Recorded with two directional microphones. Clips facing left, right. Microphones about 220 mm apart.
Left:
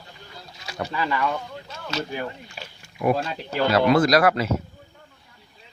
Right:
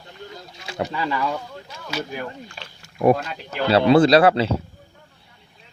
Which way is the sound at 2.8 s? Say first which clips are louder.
Right 5 dB; 40° right (ahead or behind).